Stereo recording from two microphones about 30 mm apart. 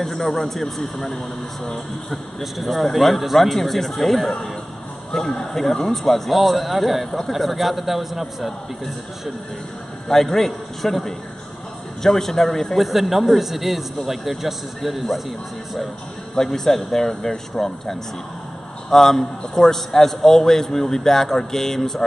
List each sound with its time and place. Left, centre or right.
0.0 s a man's voice: centre
6.3 s a man's voice: centre
10.0 s a man's voice: centre
12.8 s a man's voice: centre
16.5 s a man's voice: centre
17.1 s speech: left
18.9 s a man's voice: centre